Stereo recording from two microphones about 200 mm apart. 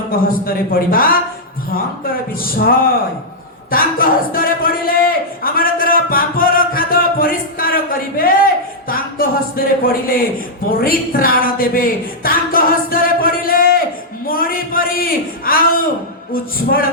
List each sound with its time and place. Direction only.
0.1 s a man's voice: 45° left (ahead or behind)
14.3 s a sound: 45° left (ahead or behind)
16.3 s a man's voice: 45° left (ahead or behind)